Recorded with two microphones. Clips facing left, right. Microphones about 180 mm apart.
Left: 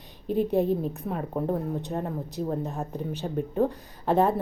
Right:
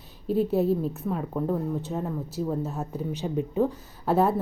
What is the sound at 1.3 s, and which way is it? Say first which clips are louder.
Speech: left 1 dB; 15° left (ahead or behind).